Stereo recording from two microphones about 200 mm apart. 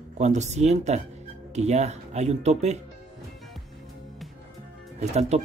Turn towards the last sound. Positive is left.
turn(degrees=-35)  # may be behind; listen again after turning